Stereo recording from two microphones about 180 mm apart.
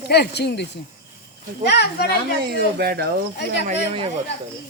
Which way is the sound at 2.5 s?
60° right (ahead or behind).